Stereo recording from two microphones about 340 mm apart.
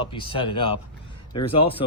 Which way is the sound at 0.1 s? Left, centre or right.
Centre.